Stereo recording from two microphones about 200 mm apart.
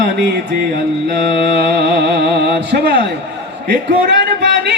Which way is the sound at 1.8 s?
55° right (ahead or behind).